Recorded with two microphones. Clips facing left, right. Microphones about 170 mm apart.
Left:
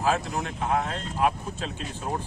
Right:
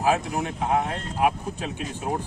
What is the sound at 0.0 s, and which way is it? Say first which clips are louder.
Speech: right 3 dB; 15° right (ahead or behind).